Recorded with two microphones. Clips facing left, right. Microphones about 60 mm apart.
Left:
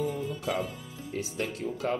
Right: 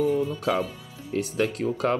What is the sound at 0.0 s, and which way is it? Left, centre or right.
Speech, right.